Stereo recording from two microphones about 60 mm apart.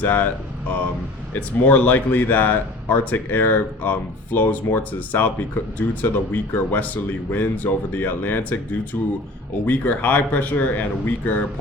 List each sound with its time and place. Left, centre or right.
0.0 s speech: left
1.3 s speech: left